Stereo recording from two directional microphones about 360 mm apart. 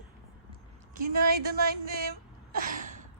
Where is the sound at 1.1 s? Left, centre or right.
Right.